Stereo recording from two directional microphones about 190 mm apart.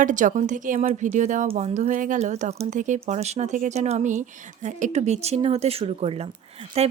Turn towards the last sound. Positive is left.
turn(degrees=-35)  # may be behind; listen again after turning